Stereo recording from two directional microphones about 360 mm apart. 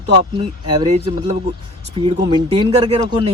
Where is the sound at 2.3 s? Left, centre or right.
Centre.